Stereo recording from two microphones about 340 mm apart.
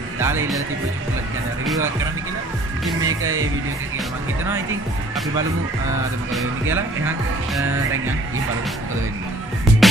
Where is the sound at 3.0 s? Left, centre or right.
Right.